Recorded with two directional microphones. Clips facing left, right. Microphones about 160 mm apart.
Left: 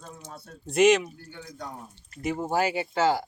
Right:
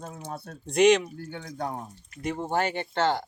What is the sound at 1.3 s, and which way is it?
Speech, 60° right (ahead or behind).